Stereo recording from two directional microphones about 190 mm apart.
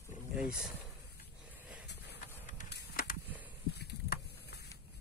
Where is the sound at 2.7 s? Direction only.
60° left (ahead or behind).